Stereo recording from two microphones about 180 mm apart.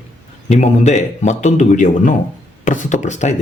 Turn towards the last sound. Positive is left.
turn(degrees=40)  # may be behind; listen again after turning